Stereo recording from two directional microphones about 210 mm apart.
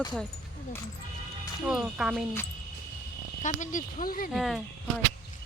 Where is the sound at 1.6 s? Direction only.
5° right (ahead or behind).